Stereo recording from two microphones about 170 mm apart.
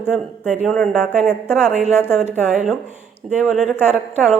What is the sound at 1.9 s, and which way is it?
Speech, 15° left (ahead or behind).